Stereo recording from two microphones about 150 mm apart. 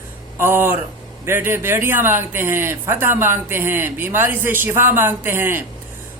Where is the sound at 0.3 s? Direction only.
15° right (ahead or behind).